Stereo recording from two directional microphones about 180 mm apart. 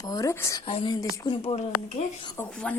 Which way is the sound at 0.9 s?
20° left (ahead or behind).